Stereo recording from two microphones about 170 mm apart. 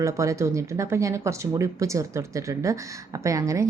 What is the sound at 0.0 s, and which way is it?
A woman's voice, 15° right (ahead or behind).